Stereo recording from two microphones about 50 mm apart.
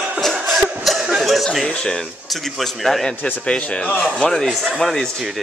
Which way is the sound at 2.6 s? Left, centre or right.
Centre.